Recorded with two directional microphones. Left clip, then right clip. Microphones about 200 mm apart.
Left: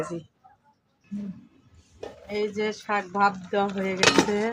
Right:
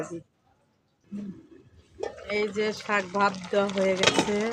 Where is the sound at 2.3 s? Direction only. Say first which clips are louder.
Even; 30° right (ahead or behind).